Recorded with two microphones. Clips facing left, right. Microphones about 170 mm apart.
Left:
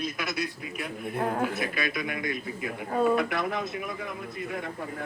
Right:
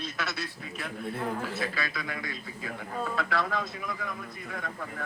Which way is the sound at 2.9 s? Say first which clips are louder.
Left 11 dB; 65° left (ahead or behind).